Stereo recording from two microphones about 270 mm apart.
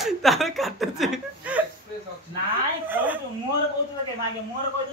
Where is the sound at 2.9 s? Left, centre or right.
Centre.